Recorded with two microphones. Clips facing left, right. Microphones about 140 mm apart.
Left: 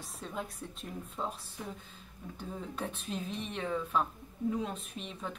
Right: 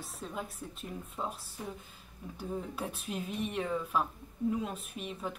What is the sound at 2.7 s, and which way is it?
Speech, 5° right (ahead or behind).